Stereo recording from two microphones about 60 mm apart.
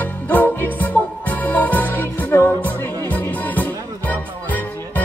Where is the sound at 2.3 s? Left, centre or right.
Left.